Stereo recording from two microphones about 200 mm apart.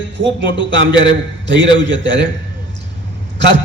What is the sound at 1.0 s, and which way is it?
Speech, 65° right (ahead or behind).